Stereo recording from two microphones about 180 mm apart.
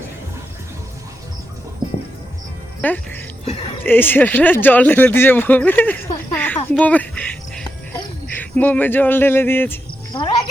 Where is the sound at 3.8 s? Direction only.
10° left (ahead or behind).